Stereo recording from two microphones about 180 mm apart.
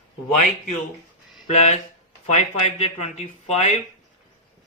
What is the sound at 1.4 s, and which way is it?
Speech, 40° left (ahead or behind).